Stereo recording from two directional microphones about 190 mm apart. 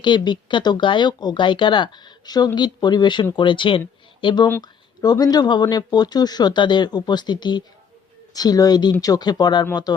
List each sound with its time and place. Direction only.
0.0 s speech: 25° left (ahead or behind)